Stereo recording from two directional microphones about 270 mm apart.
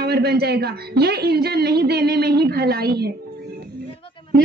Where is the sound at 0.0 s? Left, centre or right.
Right.